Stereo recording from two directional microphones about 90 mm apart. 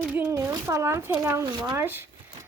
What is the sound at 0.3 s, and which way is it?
Speech, 30° right (ahead or behind).